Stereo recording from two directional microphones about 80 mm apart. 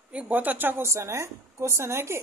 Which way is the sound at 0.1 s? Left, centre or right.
Centre.